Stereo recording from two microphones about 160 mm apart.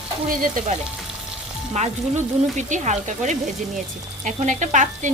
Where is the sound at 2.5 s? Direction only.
45° right (ahead or behind).